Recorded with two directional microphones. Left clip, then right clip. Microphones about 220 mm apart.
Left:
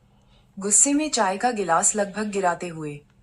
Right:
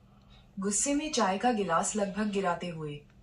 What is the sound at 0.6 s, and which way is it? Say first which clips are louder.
Speech: left 9 dB; 45° left (ahead or behind).